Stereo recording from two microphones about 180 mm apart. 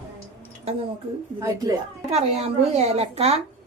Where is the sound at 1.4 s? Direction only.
20° right (ahead or behind).